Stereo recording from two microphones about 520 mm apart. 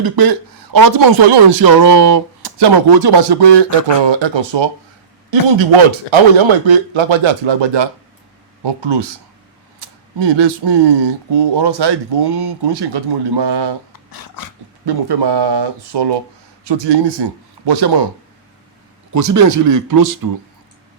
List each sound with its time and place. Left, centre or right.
0.0 s a man's voice: right
10.2 s speech: right
13.9 s dog: left
14.8 s speech: right
19.1 s speech: right